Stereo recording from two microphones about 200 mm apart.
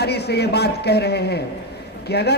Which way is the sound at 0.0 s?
55° left (ahead or behind).